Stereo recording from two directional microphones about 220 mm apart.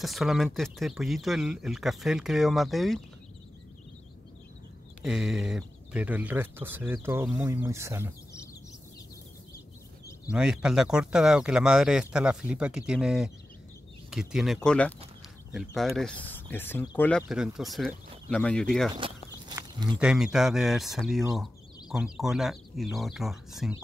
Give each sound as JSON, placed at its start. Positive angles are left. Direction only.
{"t": 0.0, "sound": "speech", "side_deg": 0}
{"t": 5.0, "sound": "speech", "side_deg": -5}
{"t": 10.2, "sound": "speech", "side_deg": -5}
{"t": 18.9, "sound": "a sound", "side_deg": -20}
{"t": 20.0, "sound": "speech", "side_deg": -5}